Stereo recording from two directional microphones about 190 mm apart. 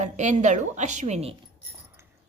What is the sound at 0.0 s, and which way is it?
A woman's voice, 40° right (ahead or behind).